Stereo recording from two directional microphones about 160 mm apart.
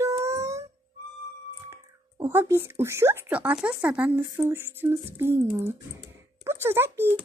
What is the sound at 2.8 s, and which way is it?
Speech, 15° right (ahead or behind).